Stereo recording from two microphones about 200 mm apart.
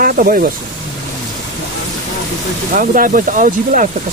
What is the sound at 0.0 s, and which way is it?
Speech, 45° right (ahead or behind).